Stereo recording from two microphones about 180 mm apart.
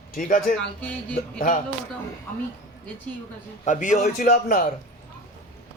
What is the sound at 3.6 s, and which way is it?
A man's voice, 45° left (ahead or behind).